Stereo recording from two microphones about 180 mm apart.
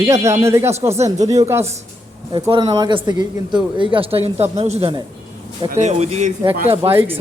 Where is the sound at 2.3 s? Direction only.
25° right (ahead or behind).